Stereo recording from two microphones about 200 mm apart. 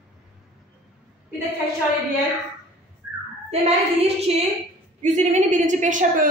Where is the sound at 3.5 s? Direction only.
30° right (ahead or behind).